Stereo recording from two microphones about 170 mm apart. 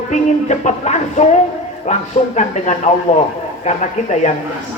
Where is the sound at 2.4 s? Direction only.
45° left (ahead or behind).